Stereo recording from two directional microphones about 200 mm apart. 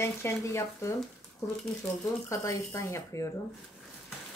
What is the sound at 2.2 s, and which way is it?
Speech, 15° left (ahead or behind).